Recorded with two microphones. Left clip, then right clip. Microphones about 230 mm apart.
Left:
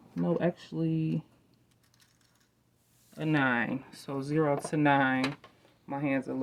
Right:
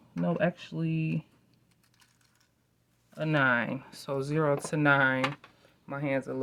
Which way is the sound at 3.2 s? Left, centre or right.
Right.